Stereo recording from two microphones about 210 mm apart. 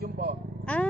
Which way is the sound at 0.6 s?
5° left (ahead or behind).